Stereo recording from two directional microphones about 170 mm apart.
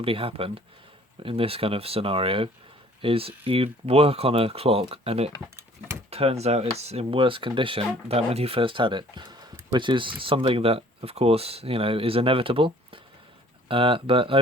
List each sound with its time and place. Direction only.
0.0 s speech: 35° right (ahead or behind)